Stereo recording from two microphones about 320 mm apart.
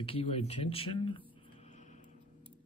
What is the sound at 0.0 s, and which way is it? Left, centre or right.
Speech, centre.